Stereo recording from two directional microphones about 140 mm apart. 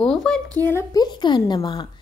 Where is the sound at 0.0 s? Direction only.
5° left (ahead or behind).